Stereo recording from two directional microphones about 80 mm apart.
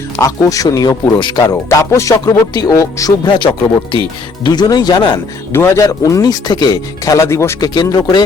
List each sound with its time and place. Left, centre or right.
0.2 s speech: left
1.4 s music: left
2.2 s speech: left
3.2 s speech: left
4.4 s speech: left
5.5 s music: left
5.8 s speech: left
6.5 s speech: left
7.0 s music: left
7.6 s speech: left